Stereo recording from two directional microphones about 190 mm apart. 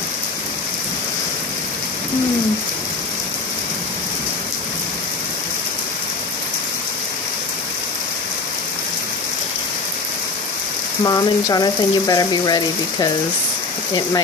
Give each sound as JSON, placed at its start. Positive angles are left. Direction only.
{"t": 11.1, "sound": "speech", "side_deg": 20}